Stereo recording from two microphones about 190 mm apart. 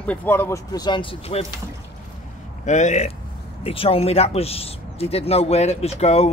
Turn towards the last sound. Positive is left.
turn(degrees=35)  # may be behind; listen again after turning